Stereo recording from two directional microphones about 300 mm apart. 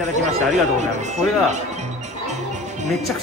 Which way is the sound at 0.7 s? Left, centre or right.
Right.